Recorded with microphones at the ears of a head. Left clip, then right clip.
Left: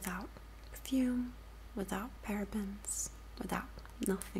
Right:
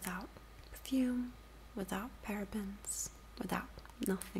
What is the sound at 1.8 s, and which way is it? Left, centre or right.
Speech, centre.